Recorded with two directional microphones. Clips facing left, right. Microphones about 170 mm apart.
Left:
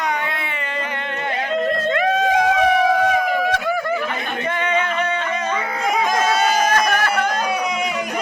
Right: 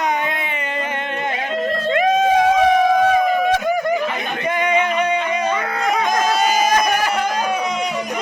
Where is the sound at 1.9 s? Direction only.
20° right (ahead or behind).